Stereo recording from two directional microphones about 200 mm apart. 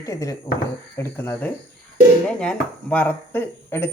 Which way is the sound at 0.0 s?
15° left (ahead or behind).